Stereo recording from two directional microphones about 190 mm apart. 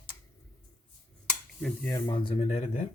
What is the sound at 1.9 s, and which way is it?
Speech, 25° left (ahead or behind).